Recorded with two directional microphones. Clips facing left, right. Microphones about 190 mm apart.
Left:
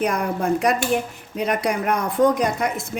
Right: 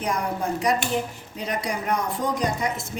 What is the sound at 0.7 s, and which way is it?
Speech, 60° left (ahead or behind).